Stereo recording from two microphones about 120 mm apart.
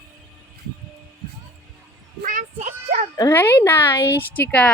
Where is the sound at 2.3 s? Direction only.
80° right.